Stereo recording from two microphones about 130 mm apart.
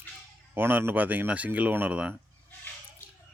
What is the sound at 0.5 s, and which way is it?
Speech, 15° right (ahead or behind).